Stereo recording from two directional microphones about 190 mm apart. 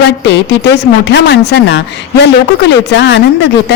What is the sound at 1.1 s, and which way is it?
Speech, 65° left (ahead or behind).